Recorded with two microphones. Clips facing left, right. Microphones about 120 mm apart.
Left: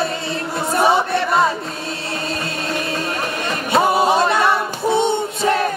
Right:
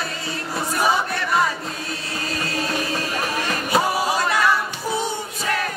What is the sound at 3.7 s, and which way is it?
A capella, 25° left (ahead or behind).